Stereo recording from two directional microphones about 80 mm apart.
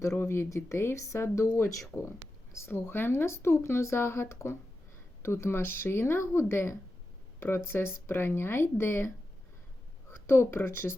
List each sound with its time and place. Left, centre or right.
0.2 s a woman's voice: left
1.9 s speech: centre
2.5 s a woman's voice: left
10.2 s a woman's voice: left